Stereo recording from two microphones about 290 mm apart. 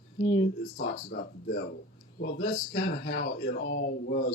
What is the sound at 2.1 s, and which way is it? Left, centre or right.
Speech, left.